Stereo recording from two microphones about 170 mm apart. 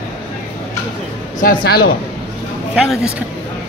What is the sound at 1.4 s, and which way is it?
Speech, 65° left (ahead or behind).